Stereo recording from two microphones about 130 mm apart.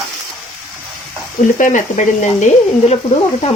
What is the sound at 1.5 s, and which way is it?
Speech, 70° left (ahead or behind).